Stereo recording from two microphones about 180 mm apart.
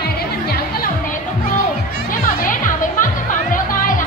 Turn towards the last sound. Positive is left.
turn(degrees=50)  # may be behind; listen again after turning